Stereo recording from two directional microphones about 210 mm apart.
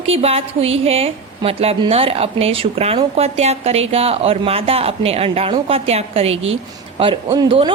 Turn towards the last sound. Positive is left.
turn(degrees=-20)  # may be behind; listen again after turning